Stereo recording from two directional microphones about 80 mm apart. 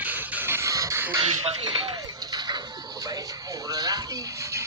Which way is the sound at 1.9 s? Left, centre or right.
Right.